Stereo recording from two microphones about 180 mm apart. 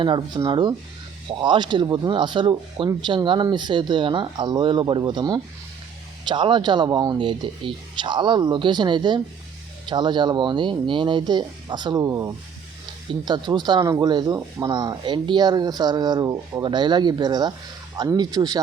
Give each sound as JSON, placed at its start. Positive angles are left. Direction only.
{"t": 0.0, "sound": "speech", "side_deg": -25}